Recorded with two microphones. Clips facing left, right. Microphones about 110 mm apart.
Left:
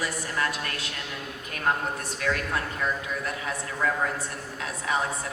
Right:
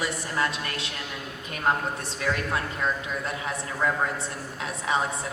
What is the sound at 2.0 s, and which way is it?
Speech, 25° right (ahead or behind).